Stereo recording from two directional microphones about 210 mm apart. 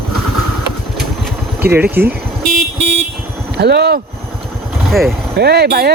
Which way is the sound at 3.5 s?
50° right (ahead or behind).